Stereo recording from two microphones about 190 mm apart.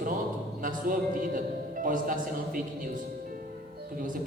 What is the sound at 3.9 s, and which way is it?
Speech, 45° right (ahead or behind).